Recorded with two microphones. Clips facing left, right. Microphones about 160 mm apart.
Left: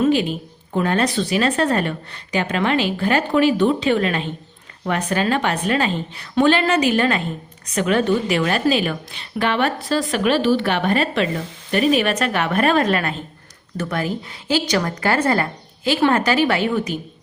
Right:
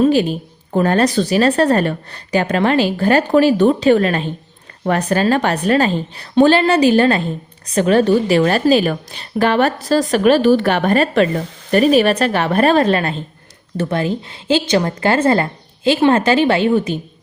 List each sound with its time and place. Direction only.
0.0 s a woman's voice: 40° right (ahead or behind)